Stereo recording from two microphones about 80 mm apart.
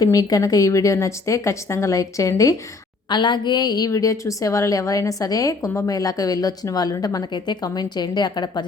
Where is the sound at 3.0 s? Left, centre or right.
Left.